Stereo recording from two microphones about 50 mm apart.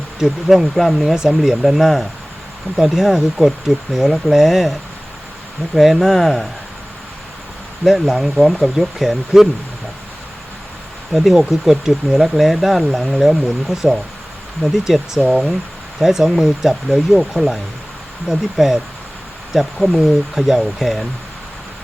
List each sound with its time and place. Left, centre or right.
0.2 s speech: centre
1.1 s speech: centre
5.7 s speech: centre
7.9 s speech: centre
11.1 s speech: centre
16.0 s speech: centre